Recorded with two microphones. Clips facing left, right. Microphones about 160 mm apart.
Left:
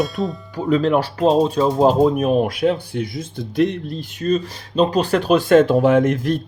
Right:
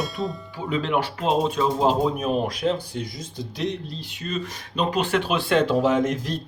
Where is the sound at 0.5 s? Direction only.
40° left (ahead or behind).